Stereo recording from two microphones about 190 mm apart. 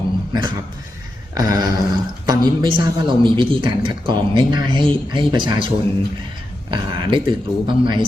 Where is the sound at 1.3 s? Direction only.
20° right (ahead or behind).